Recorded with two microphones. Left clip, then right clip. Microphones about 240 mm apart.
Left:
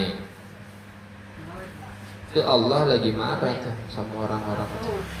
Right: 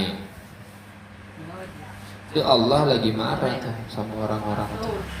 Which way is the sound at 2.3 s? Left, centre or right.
Right.